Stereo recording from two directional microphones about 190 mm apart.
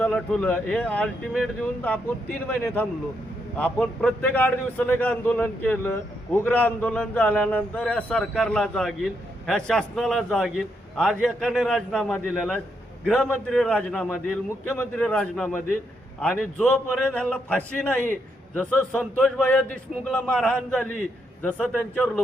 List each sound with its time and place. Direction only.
0.0 s a man's voice: 5° left (ahead or behind)